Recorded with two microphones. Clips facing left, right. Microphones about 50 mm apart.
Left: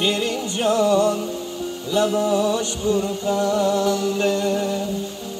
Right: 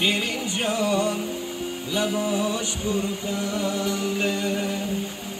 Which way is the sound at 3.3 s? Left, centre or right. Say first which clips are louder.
Left 8 dB; left.